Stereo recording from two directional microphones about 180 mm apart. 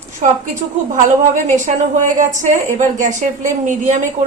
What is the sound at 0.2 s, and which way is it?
A woman's voice, 40° right (ahead or behind).